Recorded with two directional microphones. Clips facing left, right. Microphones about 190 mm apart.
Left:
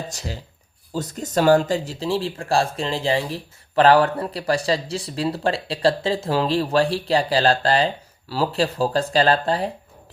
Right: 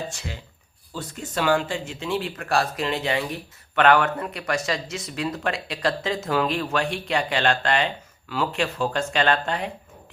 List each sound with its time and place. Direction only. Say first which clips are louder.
0.1 s speech: left 4 dB; 40° left (ahead or behind)